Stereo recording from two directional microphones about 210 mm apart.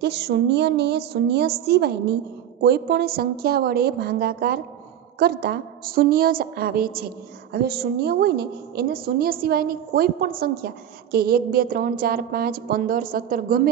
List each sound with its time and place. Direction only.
0.0 s a woman's voice: 50° right (ahead or behind)